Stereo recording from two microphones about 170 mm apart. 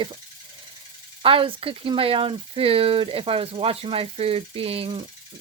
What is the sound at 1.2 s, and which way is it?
Speech, 30° right (ahead or behind).